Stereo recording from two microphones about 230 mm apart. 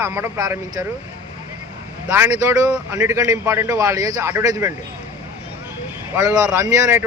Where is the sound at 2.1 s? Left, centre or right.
Centre.